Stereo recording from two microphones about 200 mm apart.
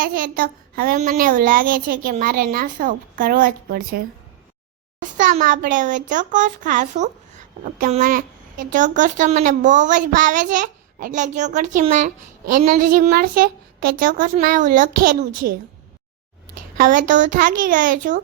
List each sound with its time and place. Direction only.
0.0 s a child's voice: 45° right (ahead or behind)
5.1 s a child's voice: 40° right (ahead or behind)
16.7 s a child's voice: 40° right (ahead or behind)